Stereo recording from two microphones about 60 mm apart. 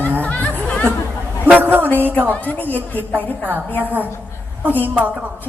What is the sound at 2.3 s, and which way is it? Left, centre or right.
Speech, left.